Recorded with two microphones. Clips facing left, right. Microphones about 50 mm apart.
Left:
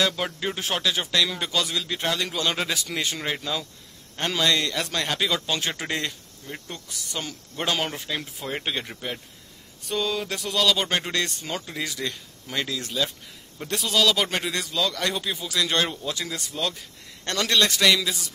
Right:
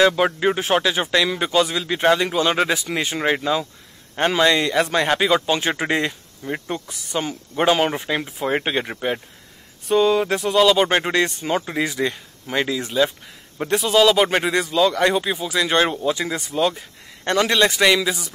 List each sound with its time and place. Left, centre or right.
0.0 s speech: right
6.4 s speech: right
6.9 s speech: right